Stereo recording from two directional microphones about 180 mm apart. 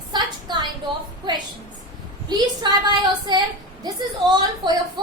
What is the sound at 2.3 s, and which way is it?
A woman's voice, 25° right (ahead or behind).